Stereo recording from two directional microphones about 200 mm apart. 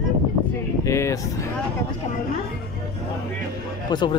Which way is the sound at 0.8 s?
15° left (ahead or behind).